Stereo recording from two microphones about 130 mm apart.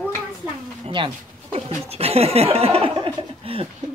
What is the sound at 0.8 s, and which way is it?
Speech, 40° right (ahead or behind).